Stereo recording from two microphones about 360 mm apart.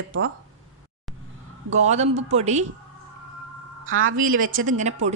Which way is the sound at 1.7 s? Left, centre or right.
Centre.